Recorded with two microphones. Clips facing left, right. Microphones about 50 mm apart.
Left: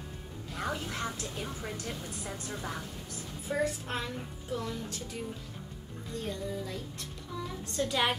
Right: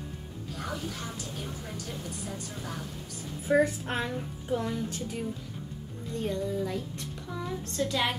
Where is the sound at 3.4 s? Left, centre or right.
Right.